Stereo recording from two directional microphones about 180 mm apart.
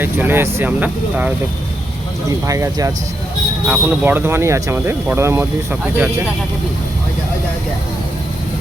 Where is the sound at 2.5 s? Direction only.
20° right (ahead or behind).